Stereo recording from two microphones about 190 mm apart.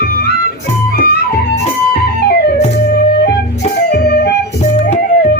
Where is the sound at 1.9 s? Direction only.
55° left (ahead or behind).